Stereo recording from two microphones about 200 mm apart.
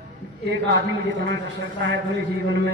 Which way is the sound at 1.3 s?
60° right (ahead or behind).